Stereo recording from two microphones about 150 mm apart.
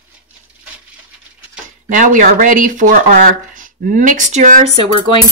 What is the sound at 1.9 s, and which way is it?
Speech, 60° right (ahead or behind).